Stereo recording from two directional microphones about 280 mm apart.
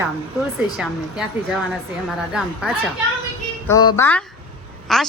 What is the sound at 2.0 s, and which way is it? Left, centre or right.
Speech, centre.